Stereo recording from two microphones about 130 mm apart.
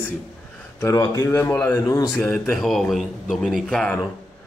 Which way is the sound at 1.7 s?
30° left (ahead or behind).